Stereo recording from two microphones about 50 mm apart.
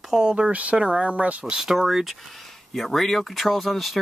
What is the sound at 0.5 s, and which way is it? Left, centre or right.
Speech, right.